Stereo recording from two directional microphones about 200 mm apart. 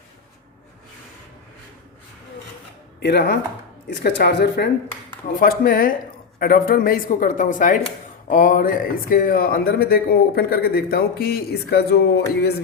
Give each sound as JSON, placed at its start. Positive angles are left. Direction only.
{"t": 3.0, "sound": "speech", "side_deg": 55}
{"t": 5.4, "sound": "speech", "side_deg": 45}